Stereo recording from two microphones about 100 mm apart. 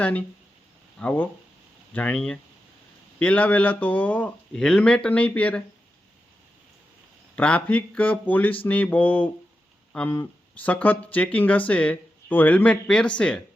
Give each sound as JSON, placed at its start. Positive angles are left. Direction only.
{"t": 0.0, "sound": "speech", "side_deg": 15}
{"t": 7.3, "sound": "speech", "side_deg": 15}
{"t": 9.9, "sound": "a sound", "side_deg": 15}
{"t": 10.6, "sound": "speech", "side_deg": 15}